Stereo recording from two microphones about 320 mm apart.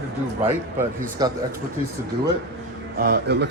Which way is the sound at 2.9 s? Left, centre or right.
Right.